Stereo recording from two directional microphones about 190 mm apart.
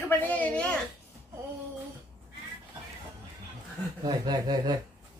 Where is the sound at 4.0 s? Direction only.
20° right (ahead or behind).